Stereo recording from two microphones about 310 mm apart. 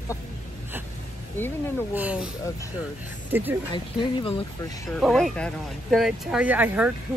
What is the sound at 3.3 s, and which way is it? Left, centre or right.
Speech, centre.